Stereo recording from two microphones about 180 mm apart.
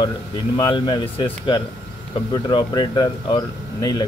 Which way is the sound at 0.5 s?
25° left (ahead or behind).